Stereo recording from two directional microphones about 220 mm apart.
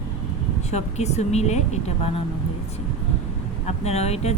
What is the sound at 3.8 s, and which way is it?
Speech, 30° left (ahead or behind).